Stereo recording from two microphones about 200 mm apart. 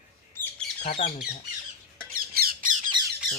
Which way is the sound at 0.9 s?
30° left (ahead or behind).